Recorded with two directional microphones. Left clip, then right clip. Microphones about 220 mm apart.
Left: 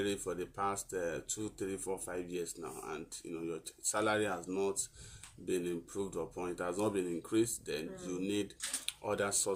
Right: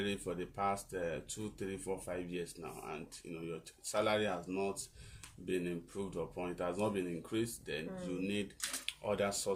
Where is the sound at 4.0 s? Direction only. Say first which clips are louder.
Even; 10° left (ahead or behind).